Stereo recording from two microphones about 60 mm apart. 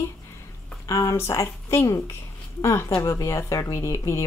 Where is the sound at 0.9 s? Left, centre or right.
Left.